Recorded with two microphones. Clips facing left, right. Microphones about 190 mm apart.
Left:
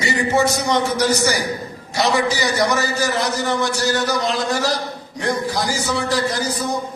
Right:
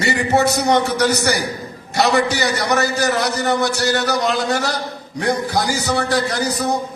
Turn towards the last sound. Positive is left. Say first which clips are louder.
# right 2 dB
turn(degrees=-65)  # may be behind; listen again after turning